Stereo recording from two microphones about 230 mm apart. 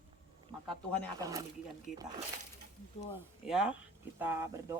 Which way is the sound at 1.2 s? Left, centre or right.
Centre.